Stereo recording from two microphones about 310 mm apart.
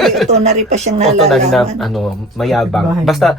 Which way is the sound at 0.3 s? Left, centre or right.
Right.